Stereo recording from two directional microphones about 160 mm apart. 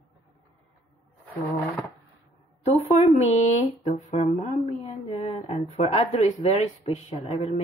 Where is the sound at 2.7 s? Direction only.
45° left (ahead or behind).